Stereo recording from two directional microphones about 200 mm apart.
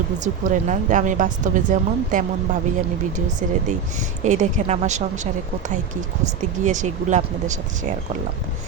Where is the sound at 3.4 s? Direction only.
40° right (ahead or behind).